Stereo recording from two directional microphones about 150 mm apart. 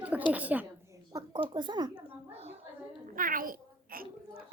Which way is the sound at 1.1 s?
25° right (ahead or behind).